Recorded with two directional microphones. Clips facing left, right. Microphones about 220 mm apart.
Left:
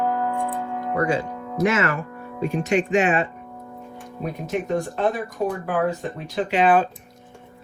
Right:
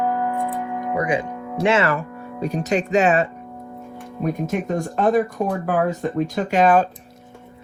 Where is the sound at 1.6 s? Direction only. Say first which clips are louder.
Right 2 dB; 30° right (ahead or behind).